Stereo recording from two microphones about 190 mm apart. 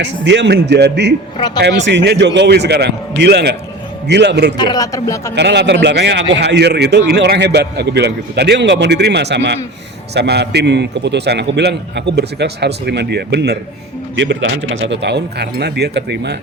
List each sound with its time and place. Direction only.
0.0 s a man's voice: 65° right (ahead or behind)
4.5 s speech: 20° left (ahead or behind)
5.3 s a man's voice: 65° right (ahead or behind)